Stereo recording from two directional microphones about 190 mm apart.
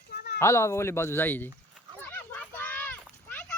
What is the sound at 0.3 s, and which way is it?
Speech, 15° left (ahead or behind).